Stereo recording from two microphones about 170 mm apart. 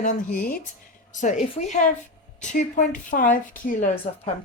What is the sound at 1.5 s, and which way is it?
Speech, 45° left (ahead or behind).